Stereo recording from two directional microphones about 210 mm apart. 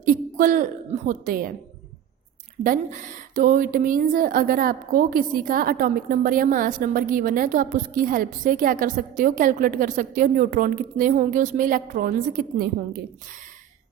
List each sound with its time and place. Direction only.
0.0 s a woman's voice: 40° right (ahead or behind)
2.6 s a woman's voice: 40° right (ahead or behind)